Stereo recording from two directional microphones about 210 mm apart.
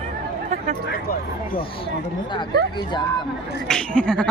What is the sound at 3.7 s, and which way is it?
Speech, 5° left (ahead or behind).